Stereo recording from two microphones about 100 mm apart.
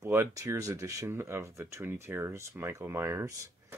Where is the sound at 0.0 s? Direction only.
25° right (ahead or behind).